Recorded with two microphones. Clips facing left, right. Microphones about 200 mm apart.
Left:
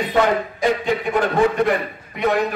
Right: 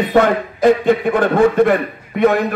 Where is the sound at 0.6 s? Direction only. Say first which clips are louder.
Right 9 dB; 55° right (ahead or behind).